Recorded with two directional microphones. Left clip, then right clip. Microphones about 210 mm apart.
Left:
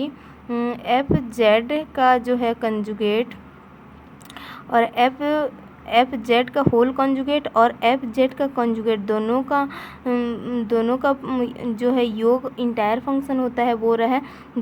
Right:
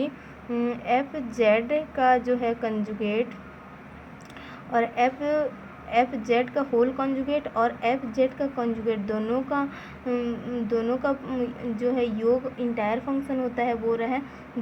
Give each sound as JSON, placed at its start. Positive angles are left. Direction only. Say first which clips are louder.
{"t": 0.5, "sound": "a woman's voice", "louder": "left 4 dB", "side_deg": 25}
{"t": 4.7, "sound": "speech", "louder": "left 6 dB", "side_deg": 35}